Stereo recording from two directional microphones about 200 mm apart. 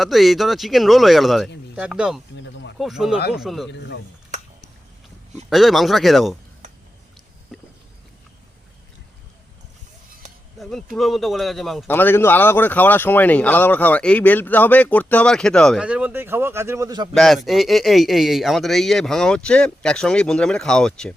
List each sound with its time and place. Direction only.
0.0 s speech: centre (ahead or behind)
2.3 s speech: 65° left (ahead or behind)
2.7 s speech: centre (ahead or behind)
3.7 s speech: 65° left (ahead or behind)
5.5 s speech: centre (ahead or behind)
7.5 s a sound: centre (ahead or behind)
10.6 s speech: centre (ahead or behind); by 17.2 s 20° right (ahead or behind)
17.2 s speech: centre (ahead or behind)